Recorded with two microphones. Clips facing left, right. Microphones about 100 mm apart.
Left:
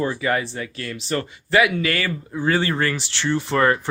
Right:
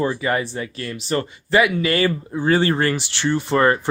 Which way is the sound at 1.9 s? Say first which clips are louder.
Right 5 dB; 30° right (ahead or behind).